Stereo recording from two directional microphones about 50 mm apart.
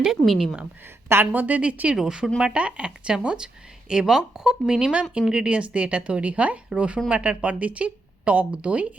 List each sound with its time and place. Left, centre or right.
0.0 s a woman's voice: centre
1.0 s a woman's voice: right
1.3 s a woman's voice: right
1.6 s speech: right
2.0 s a woman's voice: centre
2.4 s a woman's voice: right